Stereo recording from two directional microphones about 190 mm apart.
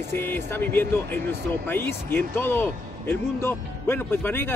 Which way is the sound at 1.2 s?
60° right (ahead or behind).